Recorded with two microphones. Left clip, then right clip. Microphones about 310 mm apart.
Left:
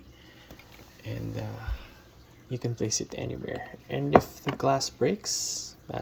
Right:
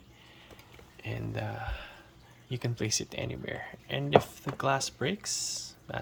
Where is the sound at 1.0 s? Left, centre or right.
Centre.